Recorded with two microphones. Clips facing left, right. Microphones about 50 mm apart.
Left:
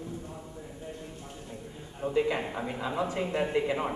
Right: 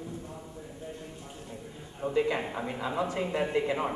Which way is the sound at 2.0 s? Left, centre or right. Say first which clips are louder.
Even; centre.